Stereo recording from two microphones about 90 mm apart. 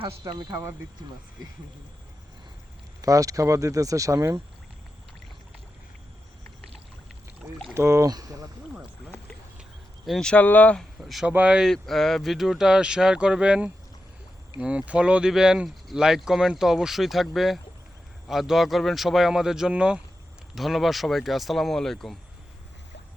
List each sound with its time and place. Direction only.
0.0 s speech: 60° right (ahead or behind)
3.0 s speech: 40° right (ahead or behind)
7.7 s speech: 30° right (ahead or behind)
8.1 s speech: 45° right (ahead or behind)
10.1 s speech: 10° left (ahead or behind)
10.4 s speech: 20° left (ahead or behind)
10.8 s speech: centre (ahead or behind)
11.3 s speech: 15° right (ahead or behind)
11.6 s speech: 5° left (ahead or behind)